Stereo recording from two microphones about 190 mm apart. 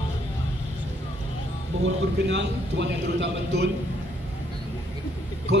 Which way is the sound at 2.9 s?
65° right (ahead or behind).